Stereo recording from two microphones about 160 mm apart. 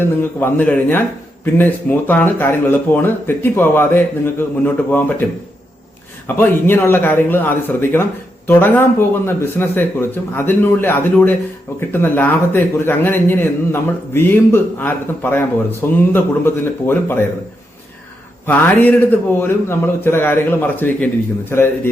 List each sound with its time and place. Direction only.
0.2 s speech: 10° left (ahead or behind)
6.2 s speech: 15° left (ahead or behind)
18.4 s speech: 10° left (ahead or behind)